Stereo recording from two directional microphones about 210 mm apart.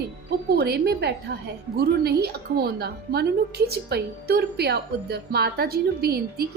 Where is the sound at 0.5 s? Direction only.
50° right (ahead or behind).